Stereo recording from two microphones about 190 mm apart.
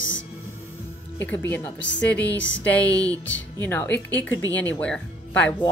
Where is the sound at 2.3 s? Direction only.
75° left (ahead or behind).